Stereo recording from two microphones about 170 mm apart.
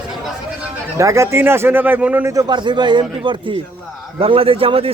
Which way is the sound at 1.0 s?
15° right (ahead or behind).